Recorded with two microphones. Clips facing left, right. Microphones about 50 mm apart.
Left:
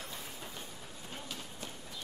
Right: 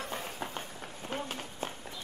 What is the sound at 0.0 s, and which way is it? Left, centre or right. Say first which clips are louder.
Run: right 7 dB; right.